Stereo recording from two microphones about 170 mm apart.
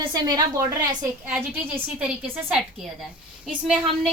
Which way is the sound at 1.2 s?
5° right (ahead or behind).